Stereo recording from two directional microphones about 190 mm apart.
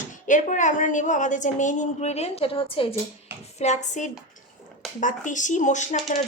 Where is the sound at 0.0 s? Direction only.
40° left (ahead or behind).